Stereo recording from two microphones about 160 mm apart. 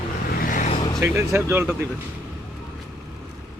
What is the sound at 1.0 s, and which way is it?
Speech, 15° right (ahead or behind).